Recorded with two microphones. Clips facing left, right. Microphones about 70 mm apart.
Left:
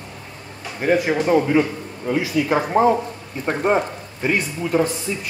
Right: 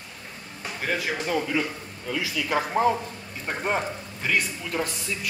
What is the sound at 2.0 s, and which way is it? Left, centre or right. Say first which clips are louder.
Speech: left 9 dB; left.